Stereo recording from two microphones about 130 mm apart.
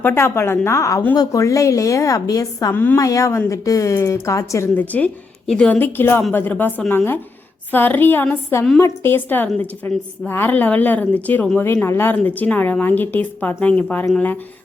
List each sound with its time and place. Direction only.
0.0 s speech: 20° left (ahead or behind)
2.7 s a woman's voice: 15° left (ahead or behind)